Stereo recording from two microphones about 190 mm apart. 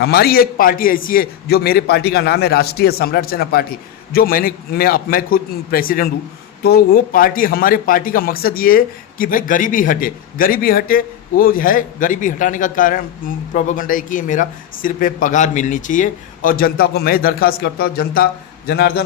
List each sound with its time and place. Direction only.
0.0 s a man's voice: 55° left (ahead or behind)